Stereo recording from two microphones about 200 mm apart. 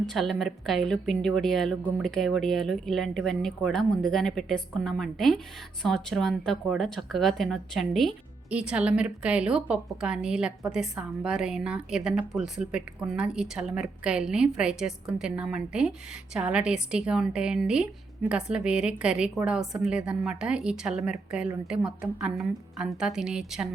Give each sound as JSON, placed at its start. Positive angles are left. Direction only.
{"t": 0.0, "sound": "a woman's voice", "side_deg": 0}